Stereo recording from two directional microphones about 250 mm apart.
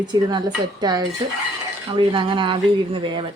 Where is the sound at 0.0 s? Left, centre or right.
Centre.